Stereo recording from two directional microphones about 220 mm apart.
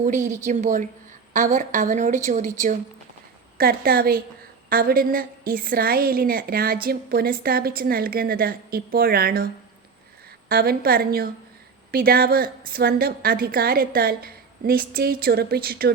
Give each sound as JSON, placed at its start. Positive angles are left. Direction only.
{"t": 0.0, "sound": "a woman's voice", "side_deg": -35}
{"t": 10.5, "sound": "a woman's voice", "side_deg": -45}